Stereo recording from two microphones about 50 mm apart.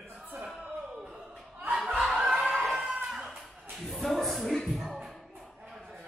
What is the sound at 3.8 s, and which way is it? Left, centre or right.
Music, centre.